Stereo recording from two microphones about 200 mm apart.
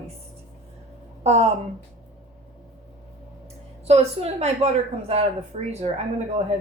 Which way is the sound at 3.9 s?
30° right (ahead or behind).